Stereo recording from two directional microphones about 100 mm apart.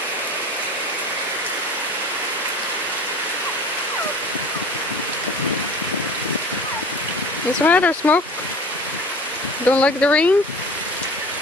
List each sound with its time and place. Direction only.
7.6 s speech: 15° left (ahead or behind)
9.7 s speech: 15° left (ahead or behind)